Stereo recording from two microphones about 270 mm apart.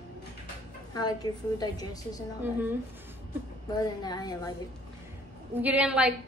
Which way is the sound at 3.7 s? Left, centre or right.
Centre.